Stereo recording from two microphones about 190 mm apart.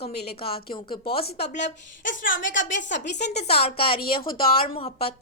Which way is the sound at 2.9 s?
65° left (ahead or behind).